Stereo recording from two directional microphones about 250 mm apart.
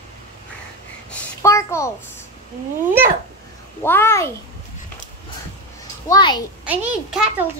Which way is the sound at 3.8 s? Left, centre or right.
Centre.